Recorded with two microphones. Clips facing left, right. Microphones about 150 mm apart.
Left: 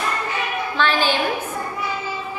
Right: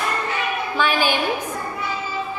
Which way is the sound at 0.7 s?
10° right (ahead or behind).